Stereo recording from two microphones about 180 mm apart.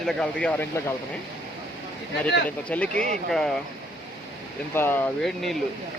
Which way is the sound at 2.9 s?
45° right (ahead or behind).